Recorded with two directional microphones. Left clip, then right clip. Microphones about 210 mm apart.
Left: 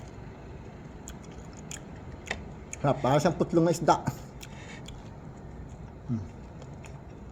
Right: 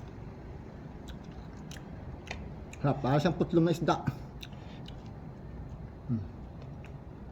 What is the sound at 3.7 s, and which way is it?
Speech, 20° right (ahead or behind).